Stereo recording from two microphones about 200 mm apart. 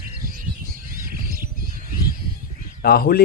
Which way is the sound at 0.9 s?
45° right (ahead or behind).